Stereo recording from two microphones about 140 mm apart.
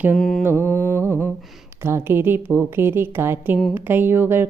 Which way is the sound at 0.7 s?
20° right (ahead or behind).